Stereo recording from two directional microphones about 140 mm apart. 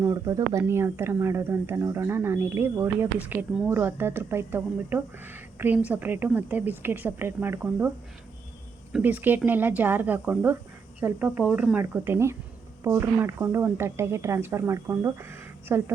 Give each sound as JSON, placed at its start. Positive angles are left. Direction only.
{"t": 0.0, "sound": "speech", "side_deg": -25}
{"t": 8.9, "sound": "speech", "side_deg": -10}